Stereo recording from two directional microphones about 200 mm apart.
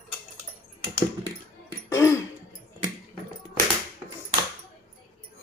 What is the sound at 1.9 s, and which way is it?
Throat clearing, 15° left (ahead or behind).